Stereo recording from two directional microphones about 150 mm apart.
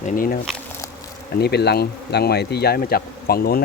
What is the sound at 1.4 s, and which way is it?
Speech, 90° left.